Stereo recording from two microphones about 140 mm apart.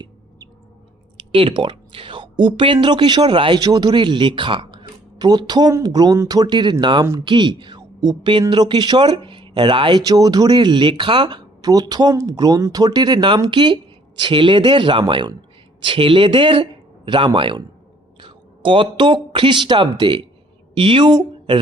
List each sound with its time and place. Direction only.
1.3 s a woman's voice: 40° right (ahead or behind)